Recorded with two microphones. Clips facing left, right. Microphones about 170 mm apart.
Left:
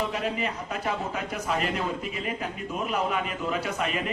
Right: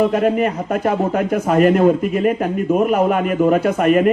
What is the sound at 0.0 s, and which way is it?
A man's voice, 55° right (ahead or behind).